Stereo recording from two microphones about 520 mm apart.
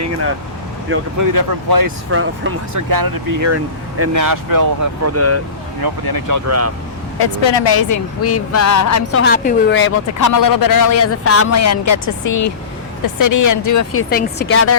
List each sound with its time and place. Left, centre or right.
1.2 s speech: right
2.0 s speech: right
2.9 s speech: right
5.8 s speech: right
7.2 s speech: left
9.2 s a woman's voice: centre
10.2 s speech: left
14.1 s speech: centre